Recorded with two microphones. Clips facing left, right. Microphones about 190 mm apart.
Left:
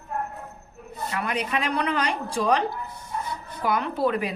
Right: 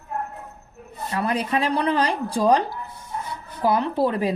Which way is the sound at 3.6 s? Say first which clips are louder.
Right 4 dB; 30° right (ahead or behind).